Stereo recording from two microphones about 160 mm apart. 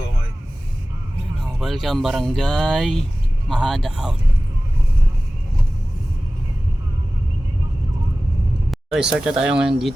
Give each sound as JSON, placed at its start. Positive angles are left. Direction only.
{"t": 1.4, "sound": "speech", "side_deg": 0}
{"t": 8.7, "sound": "speech", "side_deg": 0}